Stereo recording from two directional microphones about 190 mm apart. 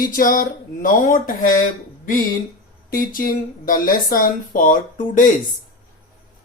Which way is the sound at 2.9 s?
45° left (ahead or behind).